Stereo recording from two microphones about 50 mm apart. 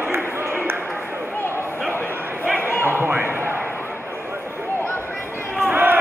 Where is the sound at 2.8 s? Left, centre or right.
Right.